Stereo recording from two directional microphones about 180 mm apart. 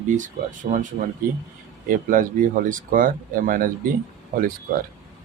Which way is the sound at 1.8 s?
50° right (ahead or behind).